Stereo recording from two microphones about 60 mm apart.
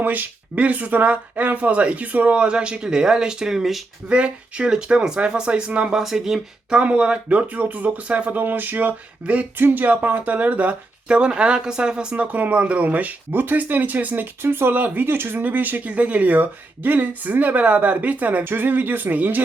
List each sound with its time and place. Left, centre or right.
0.0 s speech: right; by 3.8 s centre
4.1 s speech: centre
6.0 s speech: centre
6.7 s speech: centre
14.4 s speech: right